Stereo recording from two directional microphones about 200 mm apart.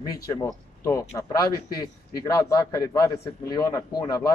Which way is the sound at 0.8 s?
15° left (ahead or behind).